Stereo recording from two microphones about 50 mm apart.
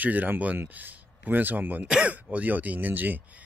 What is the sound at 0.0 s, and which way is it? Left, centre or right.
A man's voice, right.